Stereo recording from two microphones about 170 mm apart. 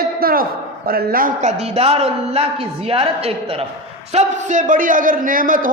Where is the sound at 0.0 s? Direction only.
60° right (ahead or behind).